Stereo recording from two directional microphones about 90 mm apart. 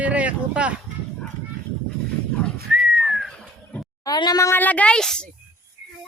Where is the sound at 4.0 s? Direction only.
50° left (ahead or behind).